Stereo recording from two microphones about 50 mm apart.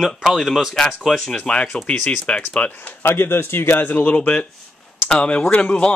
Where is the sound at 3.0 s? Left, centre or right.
Left.